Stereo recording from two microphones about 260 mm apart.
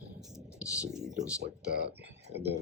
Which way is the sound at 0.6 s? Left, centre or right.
Centre.